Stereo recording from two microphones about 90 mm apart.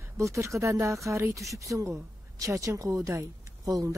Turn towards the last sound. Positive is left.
turn(degrees=-40)  # may be behind; listen again after turning